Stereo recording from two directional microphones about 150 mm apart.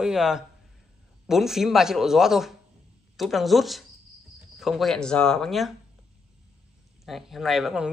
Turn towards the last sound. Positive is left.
turn(degrees=0)  # may be behind; listen again after turning